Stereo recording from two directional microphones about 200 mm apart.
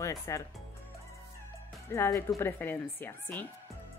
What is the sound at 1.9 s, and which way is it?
Speech, 15° left (ahead or behind).